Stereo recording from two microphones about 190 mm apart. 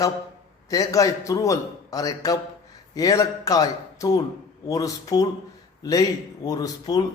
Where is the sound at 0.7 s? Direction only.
20° left (ahead or behind).